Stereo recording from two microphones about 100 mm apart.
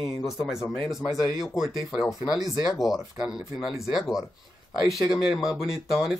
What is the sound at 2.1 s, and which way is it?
Speech, 35° left (ahead or behind).